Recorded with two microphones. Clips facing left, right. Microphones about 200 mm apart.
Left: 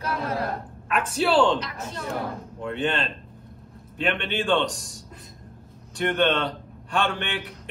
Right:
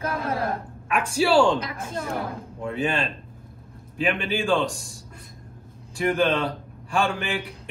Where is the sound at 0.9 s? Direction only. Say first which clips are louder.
Right 2 dB; 10° right (ahead or behind).